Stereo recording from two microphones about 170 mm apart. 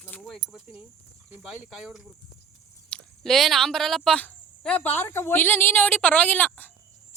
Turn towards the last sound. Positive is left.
turn(degrees=10)  # may be behind; listen again after turning